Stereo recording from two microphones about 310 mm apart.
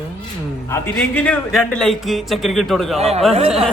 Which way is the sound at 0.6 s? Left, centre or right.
Centre.